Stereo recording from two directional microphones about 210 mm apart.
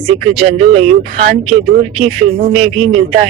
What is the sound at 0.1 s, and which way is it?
A man's voice, 30° right (ahead or behind).